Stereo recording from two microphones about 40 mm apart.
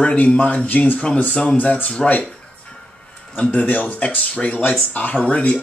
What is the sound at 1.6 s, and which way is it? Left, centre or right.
Speech, left.